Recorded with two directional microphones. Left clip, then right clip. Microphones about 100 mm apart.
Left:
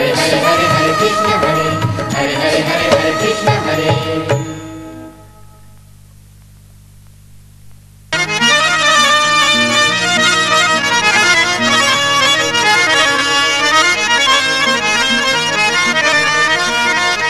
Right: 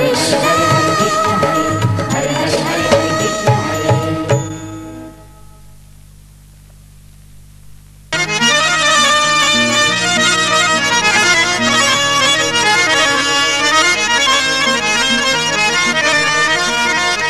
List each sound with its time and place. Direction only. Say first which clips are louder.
0.0 s music: left 1 dB; 35° right (ahead or behind)
8.1 s accordion: left 1 dB; 40° right (ahead or behind)